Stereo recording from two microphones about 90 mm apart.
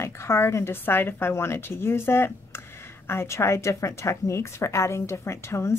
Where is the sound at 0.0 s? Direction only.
30° left (ahead or behind).